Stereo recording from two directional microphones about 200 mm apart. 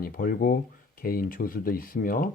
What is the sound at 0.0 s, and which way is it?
Speech, 45° left (ahead or behind).